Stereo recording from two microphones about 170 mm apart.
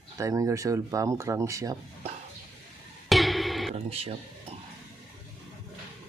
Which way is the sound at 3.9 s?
35° right (ahead or behind).